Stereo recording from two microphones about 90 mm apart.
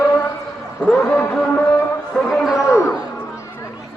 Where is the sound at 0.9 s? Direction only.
25° left (ahead or behind).